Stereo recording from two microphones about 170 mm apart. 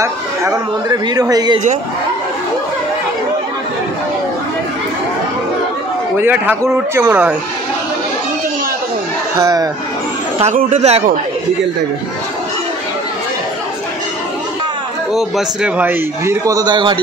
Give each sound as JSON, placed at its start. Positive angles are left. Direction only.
{"t": 0.0, "sound": "a man's voice", "side_deg": -20}
{"t": 6.1, "sound": "a man's voice", "side_deg": -10}
{"t": 9.4, "sound": "a man's voice", "side_deg": -20}
{"t": 10.4, "sound": "speech", "side_deg": -45}
{"t": 15.1, "sound": "a man's voice", "side_deg": -5}